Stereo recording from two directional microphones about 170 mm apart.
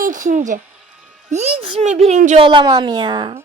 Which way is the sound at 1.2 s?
40° right (ahead or behind).